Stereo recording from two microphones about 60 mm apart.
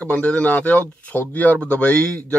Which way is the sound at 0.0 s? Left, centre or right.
Left.